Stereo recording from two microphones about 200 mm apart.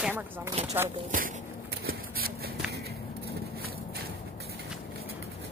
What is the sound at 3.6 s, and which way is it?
Walk, 50° right (ahead or behind).